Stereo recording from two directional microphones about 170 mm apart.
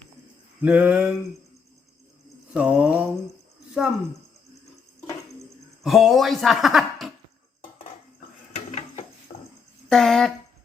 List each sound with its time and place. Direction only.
0.6 s mantra: 10° right (ahead or behind)
2.5 s mantra: 5° right (ahead or behind)
5.8 s speech: centre (ahead or behind)
8.5 s dishes: 40° left (ahead or behind)
9.9 s speech: centre (ahead or behind)